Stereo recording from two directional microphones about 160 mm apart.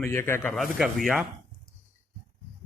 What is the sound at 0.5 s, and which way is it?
Speech, centre (ahead or behind).